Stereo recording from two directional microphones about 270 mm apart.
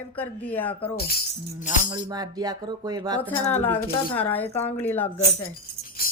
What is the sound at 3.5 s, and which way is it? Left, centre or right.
Music, centre.